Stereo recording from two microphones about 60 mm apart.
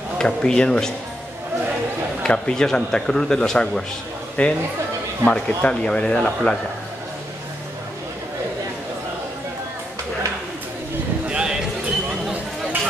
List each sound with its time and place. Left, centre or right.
0.2 s speech: centre
2.2 s speech: centre
11.2 s a sound: centre